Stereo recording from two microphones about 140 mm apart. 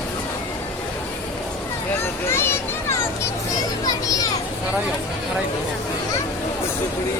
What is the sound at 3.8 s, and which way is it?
Children playing, 25° left (ahead or behind).